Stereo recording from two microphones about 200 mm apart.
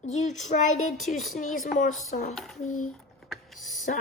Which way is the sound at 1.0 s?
Centre (ahead or behind).